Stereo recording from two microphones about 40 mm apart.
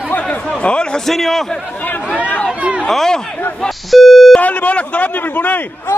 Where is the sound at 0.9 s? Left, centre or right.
Centre.